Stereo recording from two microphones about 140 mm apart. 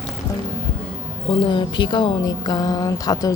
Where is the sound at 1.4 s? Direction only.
35° left (ahead or behind).